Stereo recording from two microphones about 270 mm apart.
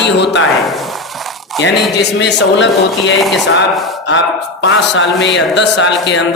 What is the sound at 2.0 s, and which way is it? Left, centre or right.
Speech, left.